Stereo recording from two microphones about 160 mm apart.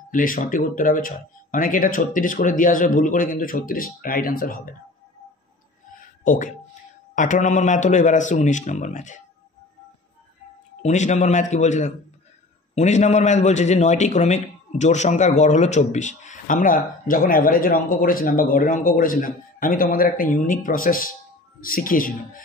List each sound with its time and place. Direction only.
0.1 s speech: 55° left (ahead or behind)
6.2 s a man's voice: 55° left (ahead or behind)
10.8 s a man's voice: 45° left (ahead or behind)